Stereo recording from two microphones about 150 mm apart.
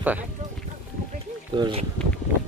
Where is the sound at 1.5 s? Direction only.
35° right (ahead or behind).